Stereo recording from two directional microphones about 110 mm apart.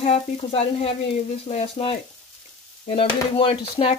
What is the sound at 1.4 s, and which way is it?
Sizzle, 80° left.